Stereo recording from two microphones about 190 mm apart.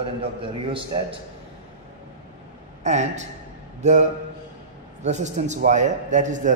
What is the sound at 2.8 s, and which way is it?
A man's voice, 40° right (ahead or behind).